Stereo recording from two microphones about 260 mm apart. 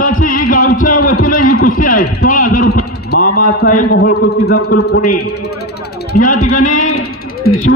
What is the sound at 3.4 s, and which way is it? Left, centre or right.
A man's voice, left.